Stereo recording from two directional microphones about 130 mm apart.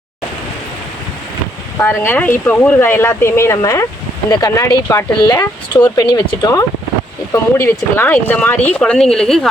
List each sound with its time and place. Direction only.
1.8 s speech: 15° left (ahead or behind)
7.6 s speech: 15° left (ahead or behind)